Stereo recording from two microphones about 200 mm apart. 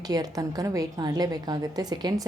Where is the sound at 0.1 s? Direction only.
20° right (ahead or behind).